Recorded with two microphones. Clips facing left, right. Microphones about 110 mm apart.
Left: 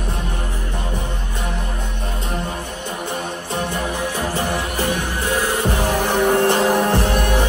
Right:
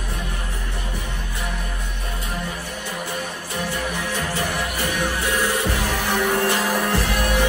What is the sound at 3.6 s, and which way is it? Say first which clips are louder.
Music: left 1 dB; 20° left (ahead or behind).